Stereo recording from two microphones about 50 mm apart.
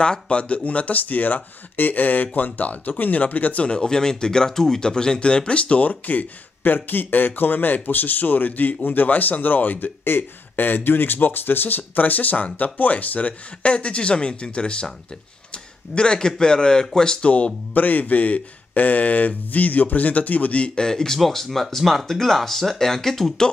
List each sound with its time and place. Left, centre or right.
0.0 s speech: left
3.6 s speech: centre
15.9 s a man's voice: centre
17.3 s speech: left
20.7 s speech: centre